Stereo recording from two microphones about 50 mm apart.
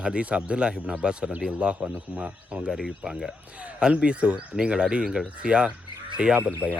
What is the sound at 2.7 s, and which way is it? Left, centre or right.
Speech, centre.